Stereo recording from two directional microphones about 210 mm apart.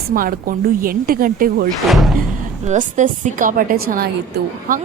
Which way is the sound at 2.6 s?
35° right (ahead or behind).